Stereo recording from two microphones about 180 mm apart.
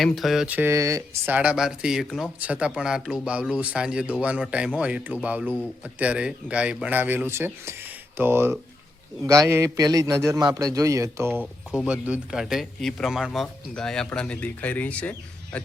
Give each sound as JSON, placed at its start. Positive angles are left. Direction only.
{"t": 0.0, "sound": "a man's voice", "side_deg": 0}